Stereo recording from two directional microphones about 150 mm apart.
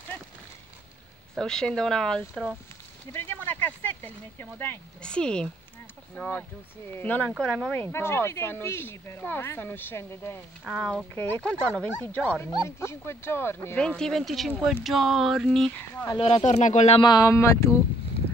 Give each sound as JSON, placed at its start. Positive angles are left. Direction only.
{"t": 1.3, "sound": "speech", "side_deg": 5}
{"t": 10.6, "sound": "speech", "side_deg": 0}
{"t": 12.6, "sound": "speech", "side_deg": 15}
{"t": 16.2, "sound": "speech", "side_deg": 40}
{"t": 17.0, "sound": "speech", "side_deg": 25}